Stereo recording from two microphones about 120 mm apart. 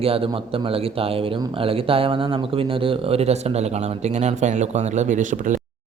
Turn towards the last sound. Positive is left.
turn(degrees=-90)